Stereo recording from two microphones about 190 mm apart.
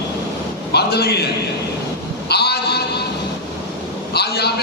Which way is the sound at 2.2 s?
60° left (ahead or behind).